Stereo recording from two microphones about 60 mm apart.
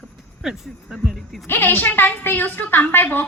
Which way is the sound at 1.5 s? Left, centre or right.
Left.